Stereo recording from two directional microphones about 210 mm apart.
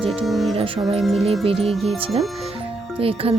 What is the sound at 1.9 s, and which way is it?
Speech, 25° right (ahead or behind).